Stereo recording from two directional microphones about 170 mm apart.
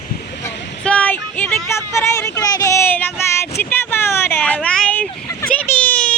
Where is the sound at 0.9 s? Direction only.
10° left (ahead or behind).